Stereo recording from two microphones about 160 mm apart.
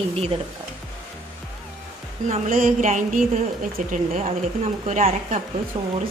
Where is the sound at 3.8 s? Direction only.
50° right (ahead or behind).